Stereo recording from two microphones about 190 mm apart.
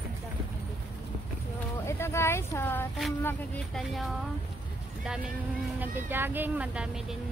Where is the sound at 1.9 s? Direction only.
15° left (ahead or behind).